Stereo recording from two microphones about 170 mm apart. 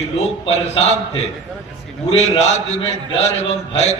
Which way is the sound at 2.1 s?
40° left (ahead or behind).